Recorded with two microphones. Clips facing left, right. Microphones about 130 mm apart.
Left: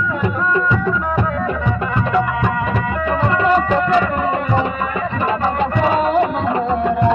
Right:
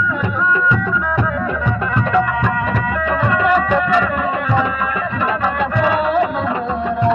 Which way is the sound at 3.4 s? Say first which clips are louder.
Even; 30° left (ahead or behind).